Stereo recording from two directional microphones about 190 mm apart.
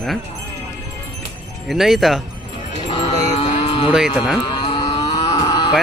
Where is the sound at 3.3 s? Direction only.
35° left (ahead or behind).